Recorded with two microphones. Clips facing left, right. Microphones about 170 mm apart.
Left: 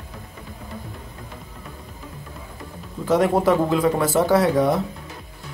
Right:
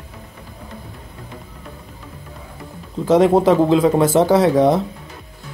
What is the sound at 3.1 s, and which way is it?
Speech, 25° right (ahead or behind).